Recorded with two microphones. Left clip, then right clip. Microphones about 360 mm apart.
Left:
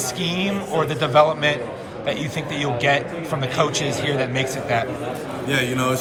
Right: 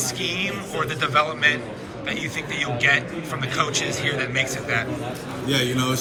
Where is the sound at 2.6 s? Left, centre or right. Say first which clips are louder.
Even; centre.